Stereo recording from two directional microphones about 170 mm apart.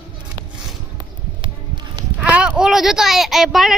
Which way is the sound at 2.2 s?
5° right (ahead or behind).